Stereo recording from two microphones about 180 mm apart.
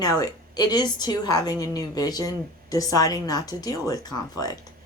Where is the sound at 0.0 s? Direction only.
20° left (ahead or behind).